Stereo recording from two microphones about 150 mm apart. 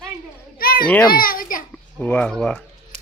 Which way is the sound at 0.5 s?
80° left.